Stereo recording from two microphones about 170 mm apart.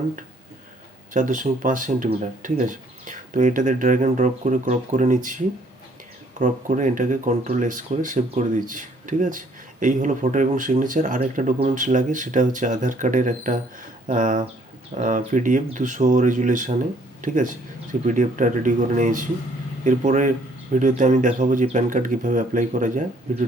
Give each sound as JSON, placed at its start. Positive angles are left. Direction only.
{"t": 1.1, "sound": "speech", "side_deg": -50}
{"t": 6.4, "sound": "speech", "side_deg": -50}